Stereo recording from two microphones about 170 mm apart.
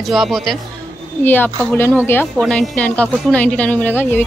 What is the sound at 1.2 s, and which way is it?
Speech, 10° left (ahead or behind).